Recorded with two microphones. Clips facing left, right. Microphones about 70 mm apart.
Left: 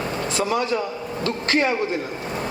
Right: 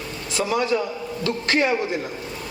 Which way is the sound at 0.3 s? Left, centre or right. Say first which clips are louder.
Right 2 dB; left.